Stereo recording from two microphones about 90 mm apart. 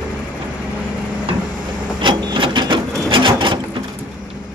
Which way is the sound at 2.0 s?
65° right (ahead or behind).